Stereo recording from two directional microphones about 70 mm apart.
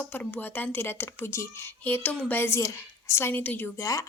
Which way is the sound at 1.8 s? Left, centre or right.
Left.